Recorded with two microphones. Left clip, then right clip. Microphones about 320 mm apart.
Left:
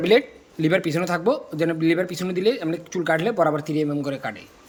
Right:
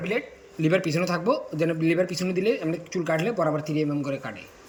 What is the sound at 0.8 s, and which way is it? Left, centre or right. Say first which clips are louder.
A man's voice: left 2 dB; centre.